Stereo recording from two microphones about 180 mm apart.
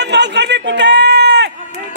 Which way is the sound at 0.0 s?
75° right (ahead or behind).